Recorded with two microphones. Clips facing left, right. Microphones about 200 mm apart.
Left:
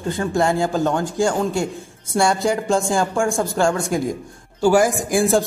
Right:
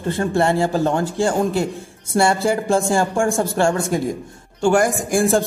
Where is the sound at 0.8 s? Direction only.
35° right (ahead or behind).